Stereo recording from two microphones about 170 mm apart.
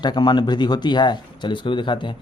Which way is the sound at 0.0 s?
25° left (ahead or behind).